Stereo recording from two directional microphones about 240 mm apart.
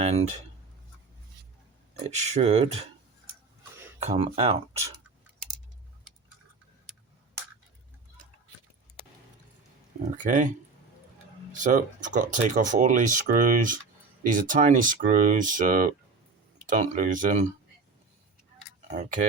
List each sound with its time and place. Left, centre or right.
0.0 s speech: right
2.0 s speech: right
4.1 s speech: right
10.2 s speech: right
11.5 s speech: right
18.9 s speech: right